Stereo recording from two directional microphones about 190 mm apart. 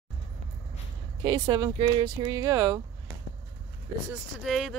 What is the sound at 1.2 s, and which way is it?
Speech, 20° right (ahead or behind).